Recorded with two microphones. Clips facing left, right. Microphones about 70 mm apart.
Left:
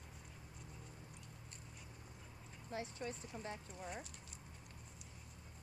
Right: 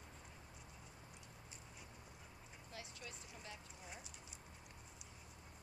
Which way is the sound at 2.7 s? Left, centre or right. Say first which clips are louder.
Left 10 dB; left.